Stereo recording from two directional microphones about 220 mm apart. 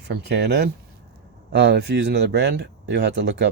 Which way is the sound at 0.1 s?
50° right (ahead or behind).